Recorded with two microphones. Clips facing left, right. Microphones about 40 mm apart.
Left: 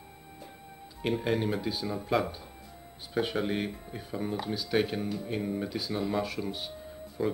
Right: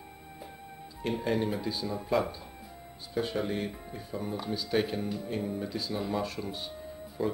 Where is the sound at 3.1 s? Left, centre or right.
Left.